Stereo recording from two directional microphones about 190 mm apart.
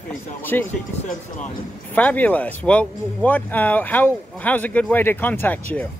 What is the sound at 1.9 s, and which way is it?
Speech, 10° left (ahead or behind).